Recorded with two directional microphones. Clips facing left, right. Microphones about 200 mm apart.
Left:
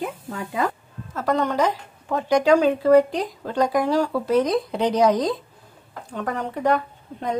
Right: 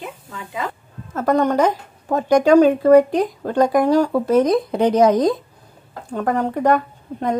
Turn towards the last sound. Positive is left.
turn(degrees=-50)  # may be behind; listen again after turning